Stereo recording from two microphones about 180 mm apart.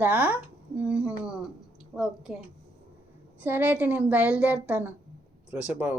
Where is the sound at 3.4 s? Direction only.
10° right (ahead or behind).